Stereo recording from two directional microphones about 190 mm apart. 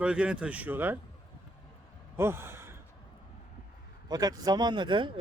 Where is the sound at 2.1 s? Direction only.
15° right (ahead or behind).